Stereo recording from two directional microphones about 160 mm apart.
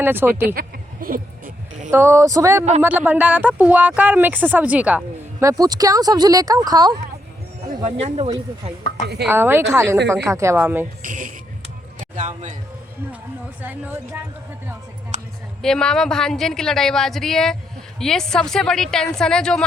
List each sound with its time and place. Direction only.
0.0 s speech: 15° right (ahead or behind)
1.0 s speech: 60° right (ahead or behind)
1.9 s speech: 20° right (ahead or behind)
5.4 s speech: 20° right (ahead or behind)
7.9 s speech: 45° right (ahead or behind)
9.2 s speech: 15° right (ahead or behind)
11.0 s speech: 55° right (ahead or behind)
11.9 s a sound: 50° right (ahead or behind)
13.6 s speech: 10° right (ahead or behind)
15.1 s a sound: 45° right (ahead or behind)
15.6 s a woman's voice: 5° left (ahead or behind)